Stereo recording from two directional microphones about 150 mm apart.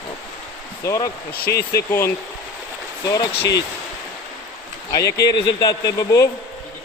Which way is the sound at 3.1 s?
30° left (ahead or behind).